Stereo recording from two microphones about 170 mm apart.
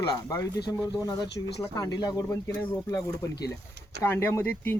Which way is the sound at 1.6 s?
20° left (ahead or behind).